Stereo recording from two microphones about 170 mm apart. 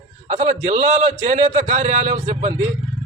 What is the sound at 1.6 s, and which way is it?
Speech, 50° right (ahead or behind).